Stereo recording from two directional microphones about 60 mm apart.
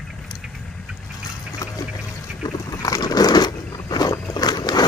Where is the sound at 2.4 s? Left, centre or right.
Left.